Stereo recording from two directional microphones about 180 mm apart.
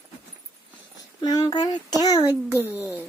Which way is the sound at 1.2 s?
20° left (ahead or behind).